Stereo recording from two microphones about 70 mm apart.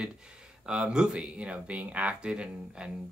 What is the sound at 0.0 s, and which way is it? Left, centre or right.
Speech, centre.